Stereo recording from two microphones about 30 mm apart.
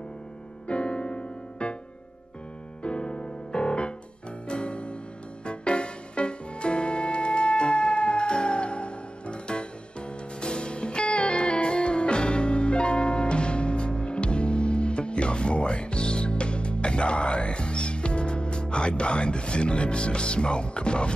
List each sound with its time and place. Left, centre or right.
0.7 s music: left
2.8 s music: left